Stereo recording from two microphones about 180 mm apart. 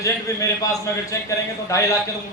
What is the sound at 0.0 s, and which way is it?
A man's voice, 20° left (ahead or behind).